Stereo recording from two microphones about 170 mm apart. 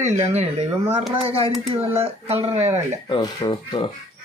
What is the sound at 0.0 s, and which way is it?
Speech, 40° right (ahead or behind).